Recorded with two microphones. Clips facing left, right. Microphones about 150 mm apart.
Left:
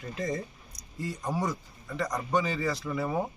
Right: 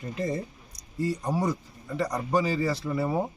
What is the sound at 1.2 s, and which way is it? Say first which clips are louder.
Speech: right 3 dB; 10° right (ahead or behind).